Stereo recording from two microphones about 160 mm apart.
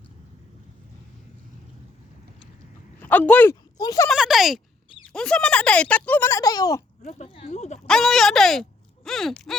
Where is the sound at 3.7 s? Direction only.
25° left (ahead or behind).